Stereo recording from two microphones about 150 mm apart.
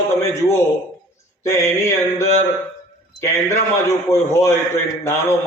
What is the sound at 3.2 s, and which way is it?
A man's voice, 20° left (ahead or behind).